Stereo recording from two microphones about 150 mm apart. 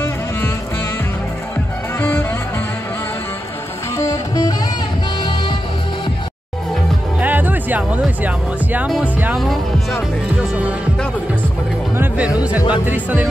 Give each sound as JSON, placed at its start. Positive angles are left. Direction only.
{"t": 2.0, "sound": "music", "side_deg": 15}
{"t": 3.9, "sound": "music", "side_deg": 25}
{"t": 7.2, "sound": "music", "side_deg": -10}
{"t": 8.7, "sound": "speech", "side_deg": -5}
{"t": 12.0, "sound": "speech", "side_deg": -10}